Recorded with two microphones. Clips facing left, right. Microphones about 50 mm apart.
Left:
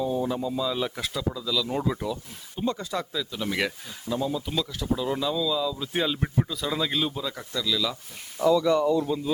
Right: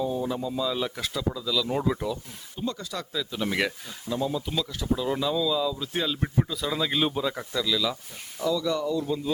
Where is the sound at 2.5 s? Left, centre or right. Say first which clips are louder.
Left 4 dB; left.